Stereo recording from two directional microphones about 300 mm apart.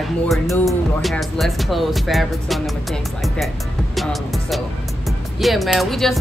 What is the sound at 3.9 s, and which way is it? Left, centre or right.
Music, centre.